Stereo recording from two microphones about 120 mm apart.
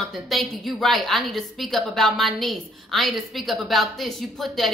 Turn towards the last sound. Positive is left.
turn(degrees=0)  # may be behind; listen again after turning